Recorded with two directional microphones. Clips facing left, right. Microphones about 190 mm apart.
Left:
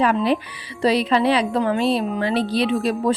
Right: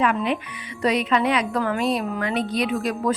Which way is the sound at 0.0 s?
35° left (ahead or behind).